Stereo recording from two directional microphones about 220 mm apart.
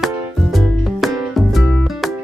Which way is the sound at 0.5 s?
Centre (ahead or behind).